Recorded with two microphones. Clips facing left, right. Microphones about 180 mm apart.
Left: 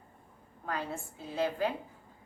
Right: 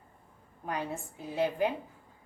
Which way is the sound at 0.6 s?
15° right (ahead or behind).